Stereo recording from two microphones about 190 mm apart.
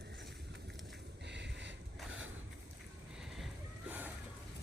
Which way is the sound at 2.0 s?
90° right.